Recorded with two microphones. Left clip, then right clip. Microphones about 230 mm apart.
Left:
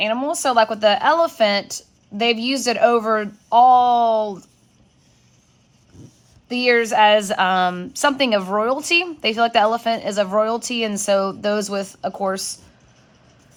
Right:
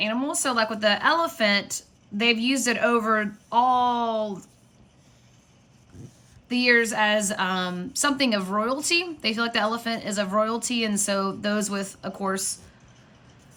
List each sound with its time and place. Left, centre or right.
0.0 s a woman's voice: centre
6.0 s a sound: centre
6.5 s a woman's voice: centre